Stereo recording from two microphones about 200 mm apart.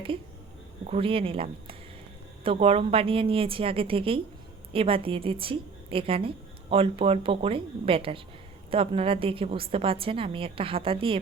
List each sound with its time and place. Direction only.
0.9 s a woman's voice: 30° right (ahead or behind)